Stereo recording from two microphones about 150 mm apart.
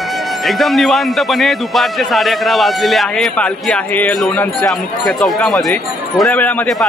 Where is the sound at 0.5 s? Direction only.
Centre (ahead or behind).